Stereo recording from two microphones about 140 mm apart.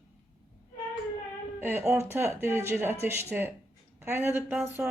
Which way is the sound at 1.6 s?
15° right (ahead or behind).